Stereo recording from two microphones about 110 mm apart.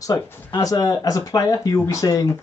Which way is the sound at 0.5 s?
35° left (ahead or behind).